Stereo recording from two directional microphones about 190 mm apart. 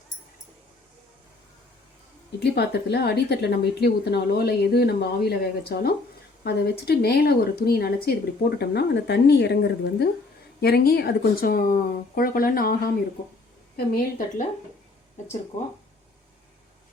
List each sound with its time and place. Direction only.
2.4 s speech: 60° left (ahead or behind)
13.7 s speech: 45° left (ahead or behind)